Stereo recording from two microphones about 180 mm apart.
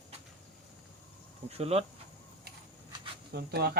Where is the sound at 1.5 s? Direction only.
35° right (ahead or behind).